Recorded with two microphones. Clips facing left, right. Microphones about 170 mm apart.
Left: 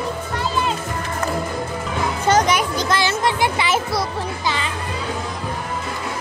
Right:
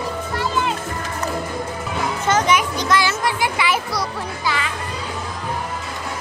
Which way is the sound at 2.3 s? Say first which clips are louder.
Left 1 dB; 35° left (ahead or behind).